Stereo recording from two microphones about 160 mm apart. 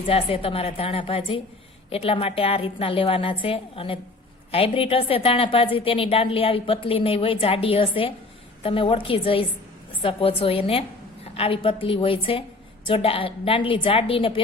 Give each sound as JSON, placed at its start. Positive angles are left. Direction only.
{"t": 0.1, "sound": "a woman's voice", "side_deg": 35}